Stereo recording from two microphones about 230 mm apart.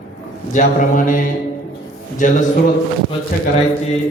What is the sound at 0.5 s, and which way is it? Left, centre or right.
A man's voice, left.